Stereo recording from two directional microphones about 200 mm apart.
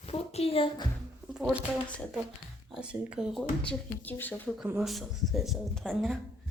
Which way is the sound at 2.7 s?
5° right (ahead or behind).